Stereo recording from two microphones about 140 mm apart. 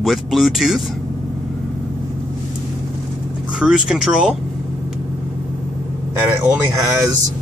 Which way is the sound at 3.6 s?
5° right (ahead or behind).